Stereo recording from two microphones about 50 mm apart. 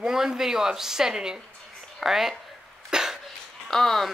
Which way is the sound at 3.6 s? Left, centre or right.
Centre.